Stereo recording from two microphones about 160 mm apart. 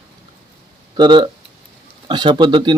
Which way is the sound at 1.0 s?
30° right (ahead or behind).